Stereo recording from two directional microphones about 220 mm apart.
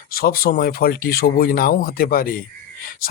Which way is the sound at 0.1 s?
40° left (ahead or behind).